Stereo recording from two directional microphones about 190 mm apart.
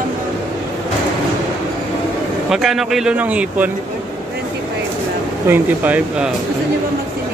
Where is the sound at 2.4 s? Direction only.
Centre (ahead or behind).